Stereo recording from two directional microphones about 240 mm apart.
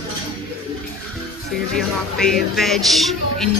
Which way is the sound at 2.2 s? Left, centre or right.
Centre.